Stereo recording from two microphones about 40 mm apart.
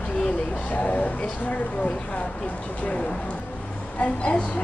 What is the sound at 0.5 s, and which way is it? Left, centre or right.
Speech, left.